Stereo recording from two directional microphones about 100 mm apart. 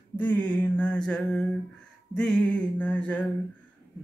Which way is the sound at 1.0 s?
10° left (ahead or behind).